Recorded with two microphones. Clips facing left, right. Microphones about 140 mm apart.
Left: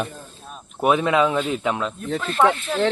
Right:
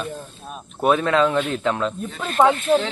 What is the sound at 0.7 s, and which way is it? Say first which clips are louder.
Speech: even; 15° left (ahead or behind).